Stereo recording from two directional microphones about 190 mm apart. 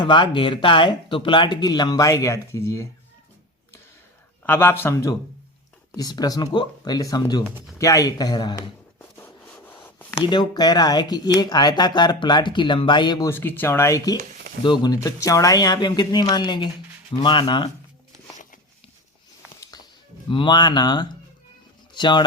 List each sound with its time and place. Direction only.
0.0 s speech: 25° left (ahead or behind)
4.4 s a man's voice: 10° left (ahead or behind)
9.1 s writing: 10° left (ahead or behind)
10.2 s speech: 25° left (ahead or behind)
14.2 s a sound: 50° right (ahead or behind)
14.6 s speech: 25° left (ahead or behind)
19.7 s music: 20° left (ahead or behind)
20.3 s speech: 25° left (ahead or behind)